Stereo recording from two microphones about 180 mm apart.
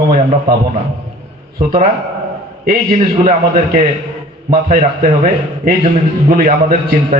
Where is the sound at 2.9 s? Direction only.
40° right (ahead or behind).